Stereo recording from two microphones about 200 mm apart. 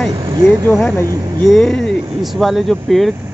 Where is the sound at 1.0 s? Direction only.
20° right (ahead or behind).